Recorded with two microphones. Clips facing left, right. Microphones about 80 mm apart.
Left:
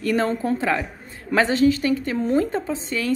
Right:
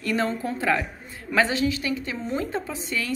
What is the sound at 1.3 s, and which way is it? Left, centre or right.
A woman's voice, left.